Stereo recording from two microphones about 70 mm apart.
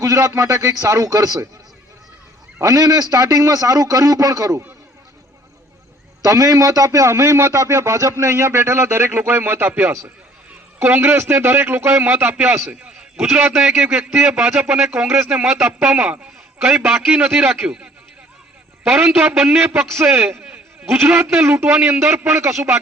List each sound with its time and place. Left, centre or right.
0.0 s speech: right
2.6 s a man's voice: right
6.2 s a man's voice: right
12.6 s a man's voice: centre
17.2 s a man's voice: right
18.9 s a man's voice: right